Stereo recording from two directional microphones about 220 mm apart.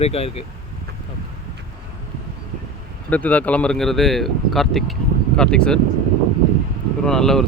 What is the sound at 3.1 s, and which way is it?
Speech, 5° left (ahead or behind).